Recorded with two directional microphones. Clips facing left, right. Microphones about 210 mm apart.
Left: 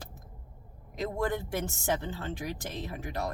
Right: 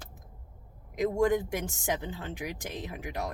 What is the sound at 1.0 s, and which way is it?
A woman's voice, 15° right (ahead or behind).